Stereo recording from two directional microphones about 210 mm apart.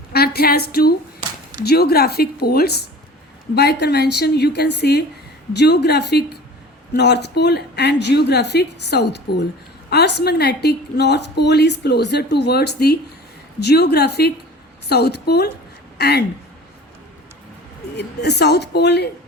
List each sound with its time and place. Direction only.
0.1 s a woman's voice: 45° left (ahead or behind)
17.9 s a woman's voice: 50° left (ahead or behind)